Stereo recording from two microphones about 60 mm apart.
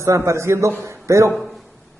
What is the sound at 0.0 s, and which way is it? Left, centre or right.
Speech, right.